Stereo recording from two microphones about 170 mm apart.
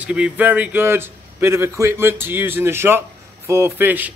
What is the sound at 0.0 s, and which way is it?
A man's voice, 5° right (ahead or behind).